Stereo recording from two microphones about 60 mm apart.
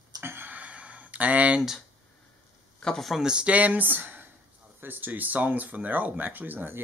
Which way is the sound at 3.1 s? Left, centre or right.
Centre.